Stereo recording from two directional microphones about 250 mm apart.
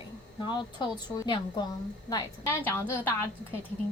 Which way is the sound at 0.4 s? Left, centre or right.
Centre.